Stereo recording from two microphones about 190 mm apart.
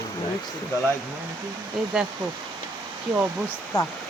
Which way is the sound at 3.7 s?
20° left (ahead or behind).